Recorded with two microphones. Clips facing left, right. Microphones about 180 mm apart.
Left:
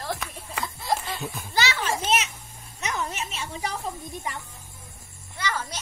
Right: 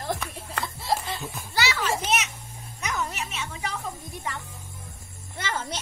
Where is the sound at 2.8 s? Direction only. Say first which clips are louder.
Even; 20° left (ahead or behind).